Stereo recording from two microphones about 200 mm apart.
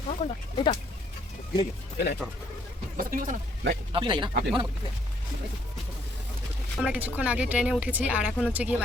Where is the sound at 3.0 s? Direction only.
45° right (ahead or behind).